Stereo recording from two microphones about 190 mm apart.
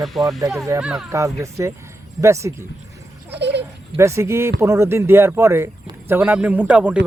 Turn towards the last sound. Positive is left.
turn(degrees=-5)  # may be behind; listen again after turning